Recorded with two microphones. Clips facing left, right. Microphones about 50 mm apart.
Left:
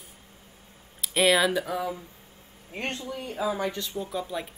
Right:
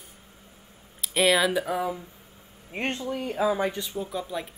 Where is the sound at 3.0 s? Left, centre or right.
Right.